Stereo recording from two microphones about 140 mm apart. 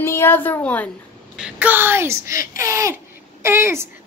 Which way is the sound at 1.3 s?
10° right (ahead or behind).